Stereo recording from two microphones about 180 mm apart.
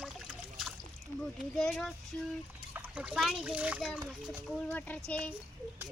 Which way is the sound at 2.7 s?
10° right (ahead or behind).